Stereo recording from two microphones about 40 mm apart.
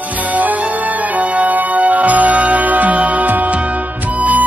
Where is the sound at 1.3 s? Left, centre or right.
Right.